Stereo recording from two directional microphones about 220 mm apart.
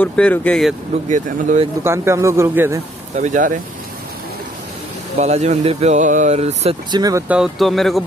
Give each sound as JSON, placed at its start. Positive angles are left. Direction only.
{"t": 0.0, "sound": "speech", "side_deg": 5}
{"t": 1.0, "sound": "speech", "side_deg": -35}
{"t": 1.8, "sound": "speech", "side_deg": -10}
{"t": 3.2, "sound": "speech", "side_deg": -35}
{"t": 5.2, "sound": "speech", "side_deg": -30}